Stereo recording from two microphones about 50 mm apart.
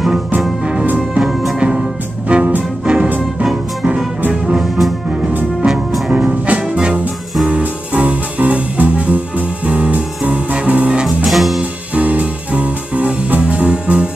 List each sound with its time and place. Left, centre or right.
2.2 s music: right
4.6 s music: centre
6.1 s music: right
11.2 s music: centre
11.9 s music: right